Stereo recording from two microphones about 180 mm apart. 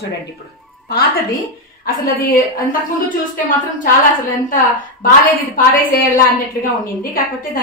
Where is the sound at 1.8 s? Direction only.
50° left (ahead or behind).